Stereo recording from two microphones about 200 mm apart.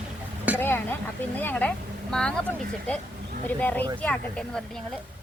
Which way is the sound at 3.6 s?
10° left (ahead or behind).